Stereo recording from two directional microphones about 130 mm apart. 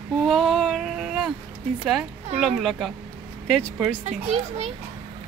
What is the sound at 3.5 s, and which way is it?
Speech, 10° left (ahead or behind).